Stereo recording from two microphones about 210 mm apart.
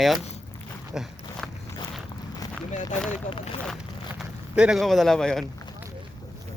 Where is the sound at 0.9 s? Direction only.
Centre (ahead or behind).